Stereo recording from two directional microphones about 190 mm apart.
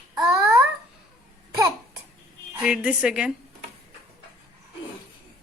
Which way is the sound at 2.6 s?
5° right (ahead or behind).